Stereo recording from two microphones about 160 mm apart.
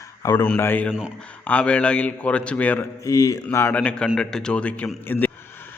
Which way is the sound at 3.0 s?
20° left (ahead or behind).